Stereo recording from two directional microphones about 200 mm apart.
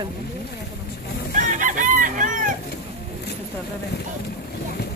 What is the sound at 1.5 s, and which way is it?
Chicken, 40° right (ahead or behind).